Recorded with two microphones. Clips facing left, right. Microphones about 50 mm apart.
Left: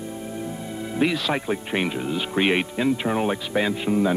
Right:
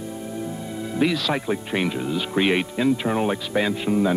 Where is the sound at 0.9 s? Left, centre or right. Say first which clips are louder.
Right 1 dB; left.